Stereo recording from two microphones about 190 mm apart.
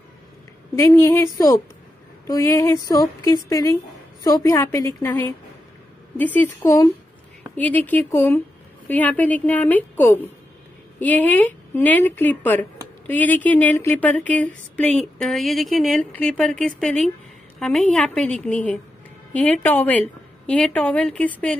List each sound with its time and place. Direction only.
0.7 s a woman's voice: 15° left (ahead or behind)